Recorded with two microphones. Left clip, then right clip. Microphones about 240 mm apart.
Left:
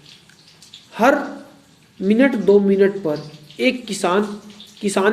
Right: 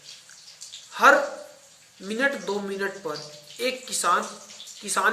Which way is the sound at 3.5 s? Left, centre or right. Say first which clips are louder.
Left 8 dB; centre.